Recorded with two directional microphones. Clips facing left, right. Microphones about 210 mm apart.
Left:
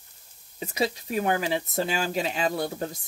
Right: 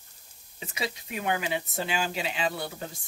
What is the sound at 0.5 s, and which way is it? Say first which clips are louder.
Frying: left 7 dB; 40° left (ahead or behind).